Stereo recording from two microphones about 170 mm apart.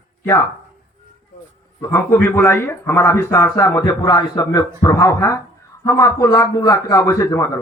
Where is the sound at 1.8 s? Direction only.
15° left (ahead or behind).